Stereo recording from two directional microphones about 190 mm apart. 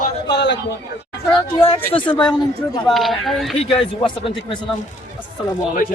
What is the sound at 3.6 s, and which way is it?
Speech, 30° left (ahead or behind).